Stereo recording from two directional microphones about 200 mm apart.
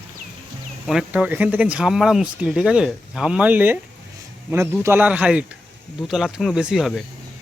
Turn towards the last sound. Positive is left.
turn(degrees=0)  # may be behind; listen again after turning